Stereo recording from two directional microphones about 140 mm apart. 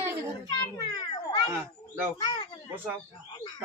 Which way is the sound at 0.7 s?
30° left (ahead or behind).